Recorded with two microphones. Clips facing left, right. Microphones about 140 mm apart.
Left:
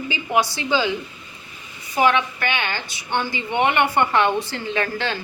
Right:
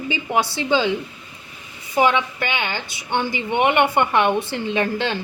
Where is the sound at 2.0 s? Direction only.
20° right (ahead or behind).